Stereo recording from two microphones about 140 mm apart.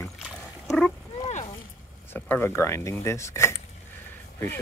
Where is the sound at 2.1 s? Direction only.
15° left (ahead or behind).